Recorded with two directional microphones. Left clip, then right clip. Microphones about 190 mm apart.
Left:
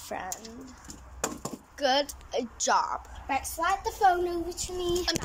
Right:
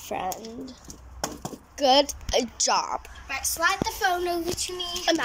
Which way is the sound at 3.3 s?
35° left (ahead or behind).